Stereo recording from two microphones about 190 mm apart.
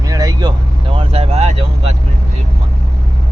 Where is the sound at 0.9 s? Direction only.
30° right (ahead or behind).